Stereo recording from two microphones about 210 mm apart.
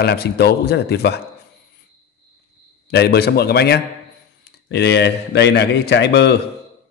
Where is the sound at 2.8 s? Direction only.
50° left (ahead or behind).